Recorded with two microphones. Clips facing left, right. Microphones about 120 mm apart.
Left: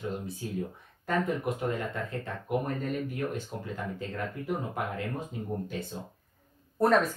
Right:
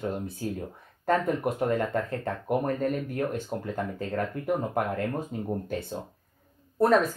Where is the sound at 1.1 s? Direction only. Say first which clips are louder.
Right 4 dB; 50° right (ahead or behind).